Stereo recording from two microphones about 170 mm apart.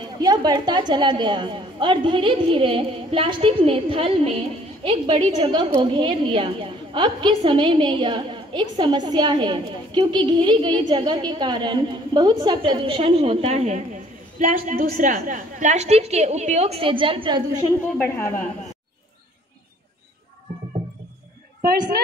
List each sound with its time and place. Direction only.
0.2 s a woman's voice: 25° right (ahead or behind)
17.9 s a woman's voice: 10° left (ahead or behind)